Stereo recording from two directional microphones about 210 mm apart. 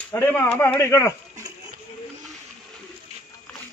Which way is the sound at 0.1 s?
10° left (ahead or behind).